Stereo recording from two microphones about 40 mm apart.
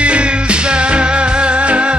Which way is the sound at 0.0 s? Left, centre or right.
Right.